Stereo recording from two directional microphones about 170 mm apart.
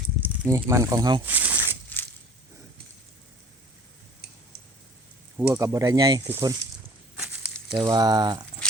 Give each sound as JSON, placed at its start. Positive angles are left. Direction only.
{"t": 0.2, "sound": "speech", "side_deg": -15}
{"t": 1.2, "sound": "a sound", "side_deg": -10}
{"t": 1.6, "sound": "crushing", "side_deg": 10}
{"t": 5.4, "sound": "speech", "side_deg": -15}
{"t": 7.2, "sound": "snake", "side_deg": -5}
{"t": 7.8, "sound": "speech", "side_deg": -25}